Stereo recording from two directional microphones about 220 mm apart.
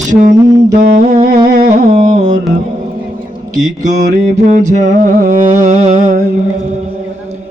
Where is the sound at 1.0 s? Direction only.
35° right (ahead or behind).